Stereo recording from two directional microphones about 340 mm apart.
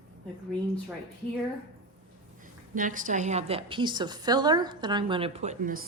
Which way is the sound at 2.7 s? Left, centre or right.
Right.